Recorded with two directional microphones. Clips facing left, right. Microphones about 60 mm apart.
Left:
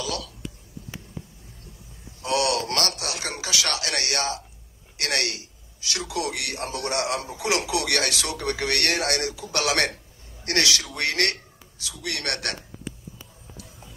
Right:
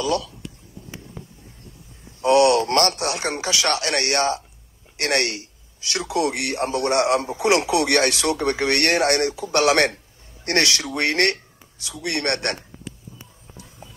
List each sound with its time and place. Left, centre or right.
0.0 s speech: right
2.2 s a man's voice: right